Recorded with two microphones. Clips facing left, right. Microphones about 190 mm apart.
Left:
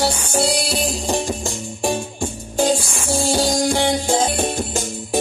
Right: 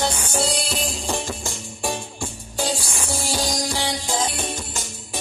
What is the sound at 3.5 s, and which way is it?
Music, 55° left (ahead or behind).